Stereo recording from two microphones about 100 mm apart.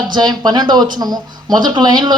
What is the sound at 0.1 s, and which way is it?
Speech, 45° right (ahead or behind).